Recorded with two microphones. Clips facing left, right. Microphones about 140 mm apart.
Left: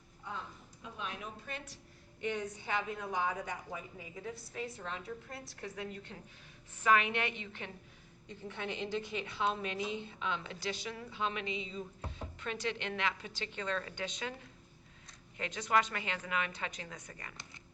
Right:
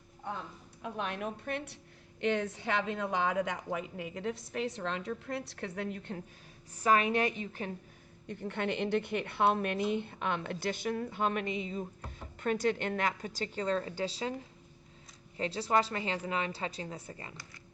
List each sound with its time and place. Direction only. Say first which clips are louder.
0.8 s a woman's voice: right 7 dB; 65° right (ahead or behind)
2.2 s a woman's voice: right 6 dB; 75° right (ahead or behind); by 6.1 s 60° right (ahead or behind)
6.7 s a woman's voice: right 3 dB; 40° right (ahead or behind)
8.3 s a woman's voice: right 7 dB; 60° right (ahead or behind); by 14.3 s 35° right (ahead or behind)
15.4 s a woman's voice: right 3 dB; 30° right (ahead or behind)